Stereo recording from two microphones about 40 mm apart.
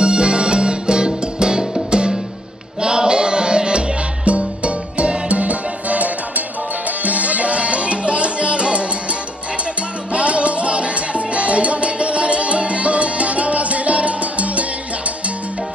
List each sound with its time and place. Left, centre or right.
0.0 s music: right
10.1 s music: right